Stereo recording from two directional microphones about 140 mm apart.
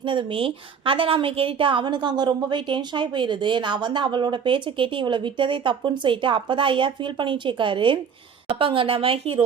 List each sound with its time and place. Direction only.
0.0 s a woman's voice: 35° right (ahead or behind)